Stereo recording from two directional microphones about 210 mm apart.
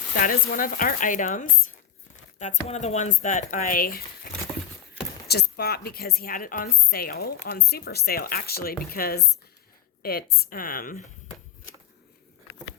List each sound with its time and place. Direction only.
0.2 s speech: 40° left (ahead or behind)
5.3 s a woman's voice: 50° left (ahead or behind)